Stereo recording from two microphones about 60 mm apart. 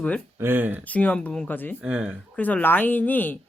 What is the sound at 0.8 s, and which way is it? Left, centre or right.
Speech, left.